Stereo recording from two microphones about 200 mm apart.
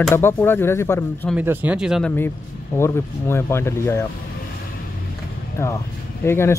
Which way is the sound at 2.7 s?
10° left (ahead or behind).